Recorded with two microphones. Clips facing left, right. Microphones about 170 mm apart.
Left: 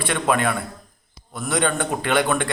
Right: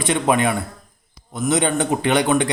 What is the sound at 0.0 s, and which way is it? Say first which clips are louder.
A man's voice: right 3 dB; 20° right (ahead or behind).